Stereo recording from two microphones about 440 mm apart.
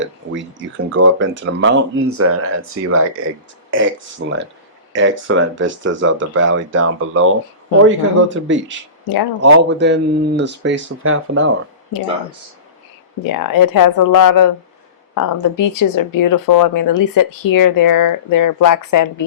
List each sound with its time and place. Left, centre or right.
0.2 s speech: right
13.2 s speech: left